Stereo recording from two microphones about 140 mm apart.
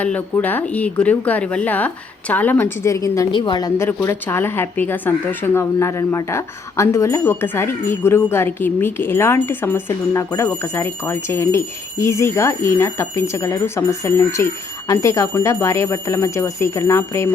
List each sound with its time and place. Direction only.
0.0 s speech: 10° left (ahead or behind)
3.3 s speech: 35° left (ahead or behind)
3.8 s speech: 20° left (ahead or behind)